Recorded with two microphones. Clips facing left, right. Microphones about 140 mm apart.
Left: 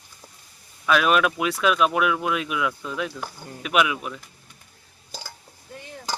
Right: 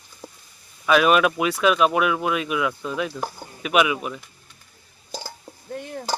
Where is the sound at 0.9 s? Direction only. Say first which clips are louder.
Right 3 dB; 5° right (ahead or behind).